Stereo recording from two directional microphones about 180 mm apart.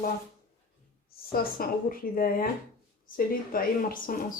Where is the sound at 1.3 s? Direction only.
55° left (ahead or behind).